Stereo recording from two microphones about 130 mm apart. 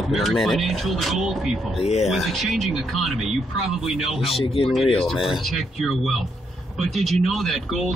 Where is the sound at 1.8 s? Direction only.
60° left (ahead or behind).